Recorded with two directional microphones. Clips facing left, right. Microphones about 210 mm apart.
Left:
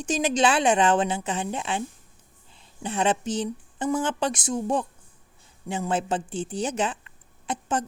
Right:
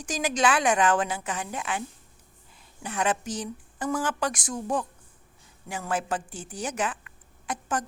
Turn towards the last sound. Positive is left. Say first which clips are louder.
# left 3 dB
turn(degrees=25)  # may be behind; listen again after turning